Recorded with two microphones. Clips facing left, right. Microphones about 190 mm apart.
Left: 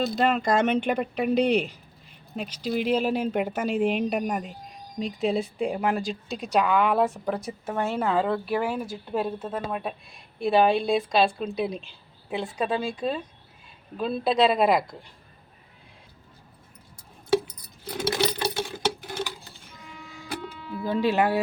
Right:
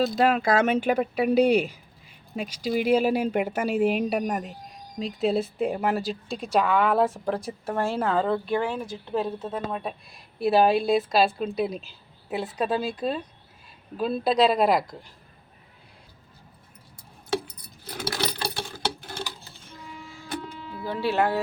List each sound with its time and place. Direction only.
0.2 s speech: 5° right (ahead or behind)
17.9 s a sound: 20° left (ahead or behind)
20.8 s speech: 15° left (ahead or behind)